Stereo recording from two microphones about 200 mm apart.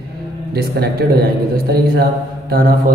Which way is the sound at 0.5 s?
50° right (ahead or behind).